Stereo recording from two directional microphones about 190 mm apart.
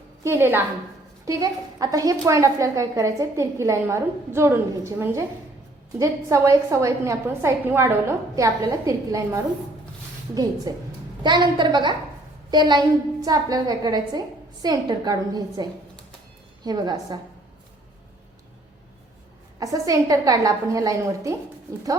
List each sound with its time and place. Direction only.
0.3 s a woman's voice: 10° right (ahead or behind)
19.5 s a woman's voice: 20° right (ahead or behind)